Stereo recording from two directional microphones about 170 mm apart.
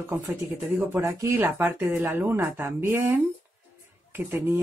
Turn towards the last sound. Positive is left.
turn(degrees=-15)  # may be behind; listen again after turning